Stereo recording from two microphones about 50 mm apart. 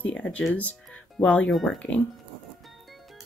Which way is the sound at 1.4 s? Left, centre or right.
Centre.